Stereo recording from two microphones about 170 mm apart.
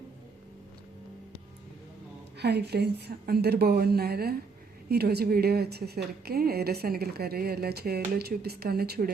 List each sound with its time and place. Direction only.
2.4 s a woman's voice: 75° right (ahead or behind)